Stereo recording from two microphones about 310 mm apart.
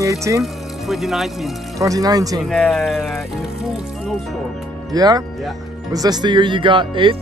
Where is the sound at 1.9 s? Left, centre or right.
Centre.